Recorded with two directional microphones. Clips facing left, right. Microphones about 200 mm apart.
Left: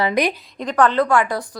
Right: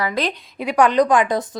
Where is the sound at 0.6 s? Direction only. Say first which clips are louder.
Right 2 dB; 10° right (ahead or behind).